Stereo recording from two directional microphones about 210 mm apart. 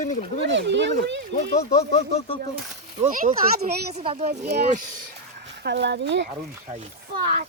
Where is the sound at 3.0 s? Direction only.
35° right (ahead or behind).